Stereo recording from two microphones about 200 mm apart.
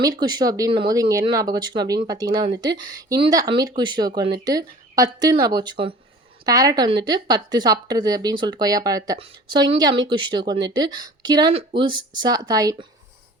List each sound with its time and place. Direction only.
0.0 s speech: 20° right (ahead or behind)